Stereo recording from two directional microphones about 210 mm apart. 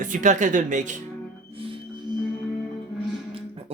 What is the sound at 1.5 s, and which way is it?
Music, 25° right (ahead or behind).